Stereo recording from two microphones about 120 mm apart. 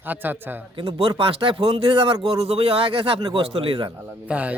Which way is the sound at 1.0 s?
50° right (ahead or behind).